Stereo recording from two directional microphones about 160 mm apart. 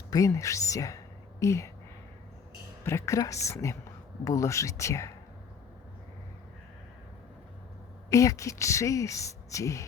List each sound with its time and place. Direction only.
0.1 s a woman's voice: 20° left (ahead or behind)
2.8 s speech: 20° left (ahead or behind)
8.1 s speech: 20° left (ahead or behind)